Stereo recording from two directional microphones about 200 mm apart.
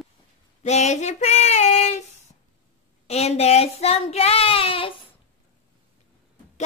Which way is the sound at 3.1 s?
30° left (ahead or behind).